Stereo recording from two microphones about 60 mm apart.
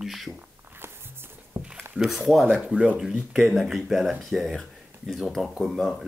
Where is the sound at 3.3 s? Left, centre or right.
Centre.